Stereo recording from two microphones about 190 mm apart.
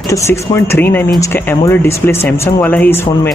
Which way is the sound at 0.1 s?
10° left (ahead or behind).